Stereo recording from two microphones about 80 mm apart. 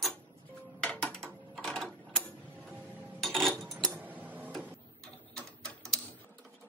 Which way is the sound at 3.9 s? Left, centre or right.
Right.